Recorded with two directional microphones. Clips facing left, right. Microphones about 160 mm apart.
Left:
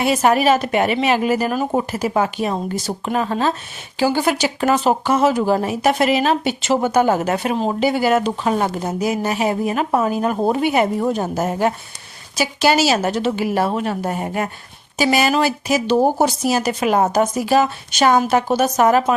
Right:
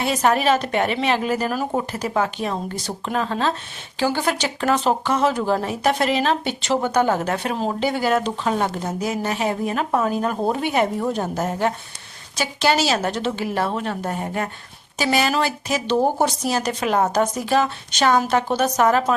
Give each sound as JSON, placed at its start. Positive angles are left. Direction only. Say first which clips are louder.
{"t": 0.0, "sound": "speech", "louder": "left 3 dB", "side_deg": 10}